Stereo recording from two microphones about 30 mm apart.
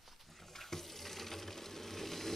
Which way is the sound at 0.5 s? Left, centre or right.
Centre.